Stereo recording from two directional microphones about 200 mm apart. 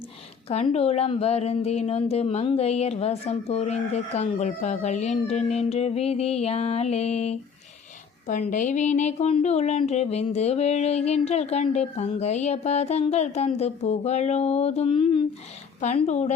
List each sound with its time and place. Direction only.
0.4 s a woman's voice: 30° left (ahead or behind)